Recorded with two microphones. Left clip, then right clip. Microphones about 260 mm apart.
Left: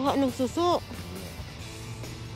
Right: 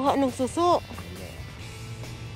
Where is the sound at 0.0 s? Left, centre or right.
Centre.